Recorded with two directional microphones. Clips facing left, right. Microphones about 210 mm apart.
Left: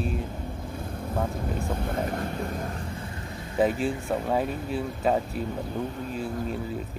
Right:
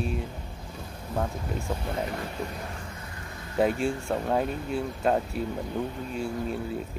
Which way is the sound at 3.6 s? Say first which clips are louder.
Left 1 dB; 5° left (ahead or behind).